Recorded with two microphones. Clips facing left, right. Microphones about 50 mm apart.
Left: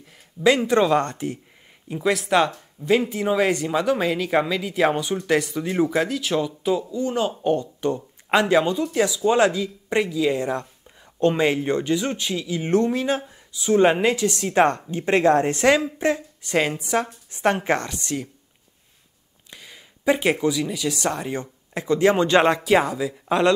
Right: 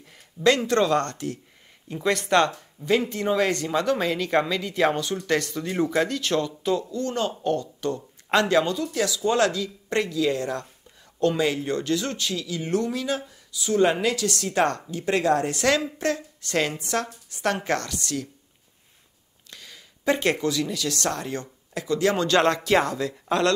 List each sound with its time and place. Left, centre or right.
0.0 s speech: centre
1.9 s speech: centre; by 18.3 s left
19.5 s speech: centre